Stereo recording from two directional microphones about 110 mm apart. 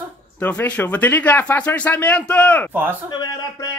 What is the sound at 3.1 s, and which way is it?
Speech, 40° left (ahead or behind).